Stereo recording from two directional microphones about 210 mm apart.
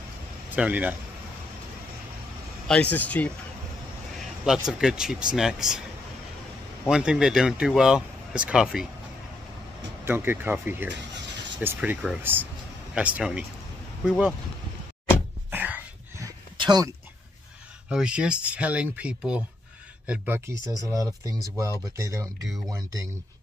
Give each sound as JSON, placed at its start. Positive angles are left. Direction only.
{"t": 0.5, "sound": "speech", "side_deg": -5}
{"t": 2.7, "sound": "speech", "side_deg": 5}
{"t": 4.6, "sound": "speech", "side_deg": -5}
{"t": 6.9, "sound": "speech", "side_deg": -5}
{"t": 10.0, "sound": "speech", "side_deg": -10}
{"t": 15.5, "sound": "a sound", "side_deg": -10}
{"t": 17.8, "sound": "speech", "side_deg": -5}